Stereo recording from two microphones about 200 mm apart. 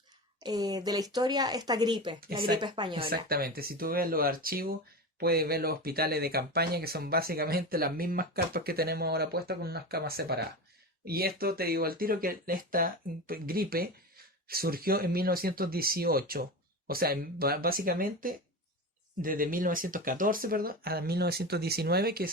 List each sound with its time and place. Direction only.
0.3 s speech: 20° right (ahead or behind)
3.2 s speech: 50° right (ahead or behind)